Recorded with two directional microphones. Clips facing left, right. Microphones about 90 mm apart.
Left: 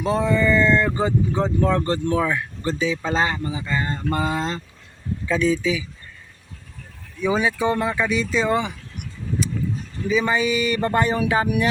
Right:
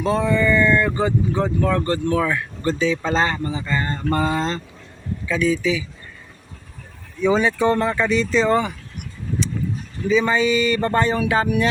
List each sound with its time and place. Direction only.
0.0 s speech: 20° left (ahead or behind)
5.2 s speech: 35° left (ahead or behind)
5.5 s speech: 20° left (ahead or behind)
7.2 s speech: 10° left (ahead or behind)
10.1 s speech: 15° left (ahead or behind)